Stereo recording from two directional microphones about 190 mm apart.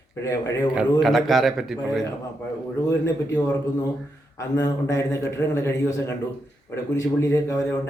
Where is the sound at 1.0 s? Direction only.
Centre (ahead or behind).